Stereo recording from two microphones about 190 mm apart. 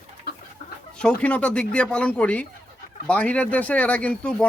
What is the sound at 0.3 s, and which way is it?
Chicken, 55° left (ahead or behind).